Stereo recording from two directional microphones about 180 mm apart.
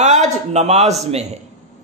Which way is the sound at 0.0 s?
40° right (ahead or behind).